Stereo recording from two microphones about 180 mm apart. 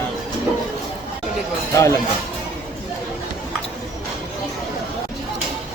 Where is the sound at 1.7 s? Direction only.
15° left (ahead or behind).